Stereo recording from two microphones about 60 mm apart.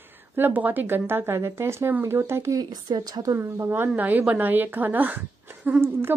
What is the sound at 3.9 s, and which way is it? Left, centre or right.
A woman's voice, right.